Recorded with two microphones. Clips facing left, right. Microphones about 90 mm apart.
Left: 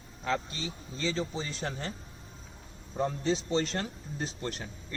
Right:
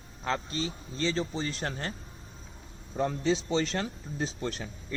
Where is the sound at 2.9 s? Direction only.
90° right.